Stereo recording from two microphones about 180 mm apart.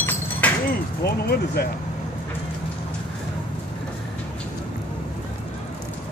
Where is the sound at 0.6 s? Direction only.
60° left (ahead or behind).